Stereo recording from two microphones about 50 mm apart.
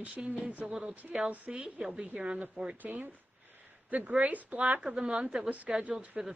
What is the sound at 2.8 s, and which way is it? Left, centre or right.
Speech, right.